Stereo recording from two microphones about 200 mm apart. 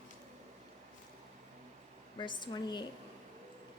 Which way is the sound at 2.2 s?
25° left (ahead or behind).